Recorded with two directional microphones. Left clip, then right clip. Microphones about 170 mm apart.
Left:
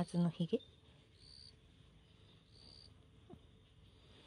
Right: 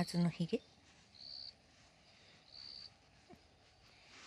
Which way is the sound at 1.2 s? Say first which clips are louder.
Right 9 dB; 90° left.